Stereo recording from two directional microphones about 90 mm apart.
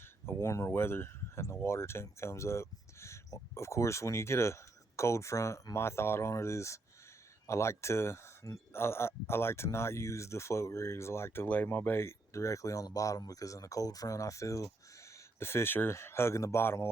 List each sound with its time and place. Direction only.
0.3 s speech: 30° left (ahead or behind)